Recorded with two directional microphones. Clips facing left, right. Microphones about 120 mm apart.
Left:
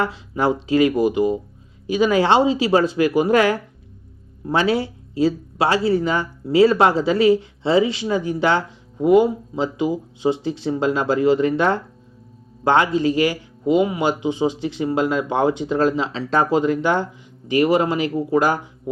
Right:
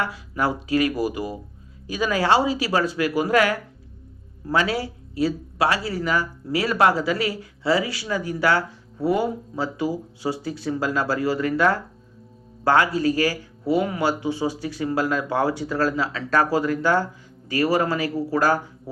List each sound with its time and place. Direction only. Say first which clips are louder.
0.0 s speech: left 4 dB; 25° left (ahead or behind)